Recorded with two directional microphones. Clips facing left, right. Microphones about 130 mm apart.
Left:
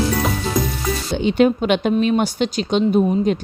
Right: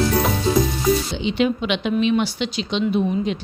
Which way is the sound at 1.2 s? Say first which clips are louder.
Left 5 dB; 45° left (ahead or behind).